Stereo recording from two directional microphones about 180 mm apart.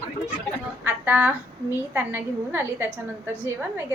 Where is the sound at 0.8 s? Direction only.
10° right (ahead or behind).